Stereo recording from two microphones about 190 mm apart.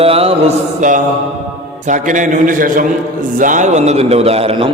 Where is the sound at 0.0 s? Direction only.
30° right (ahead or behind).